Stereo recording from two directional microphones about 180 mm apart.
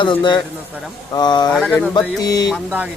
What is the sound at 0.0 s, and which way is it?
Speech, 25° left (ahead or behind).